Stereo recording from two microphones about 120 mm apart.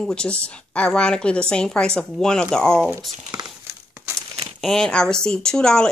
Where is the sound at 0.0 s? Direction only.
10° left (ahead or behind).